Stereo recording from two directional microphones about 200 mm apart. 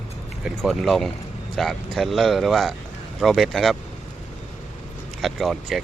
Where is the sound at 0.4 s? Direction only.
Centre (ahead or behind).